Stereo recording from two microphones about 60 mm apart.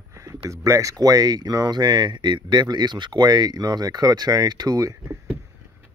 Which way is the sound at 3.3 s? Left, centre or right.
Right.